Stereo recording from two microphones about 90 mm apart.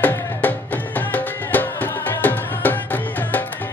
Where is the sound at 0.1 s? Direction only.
20° left (ahead or behind).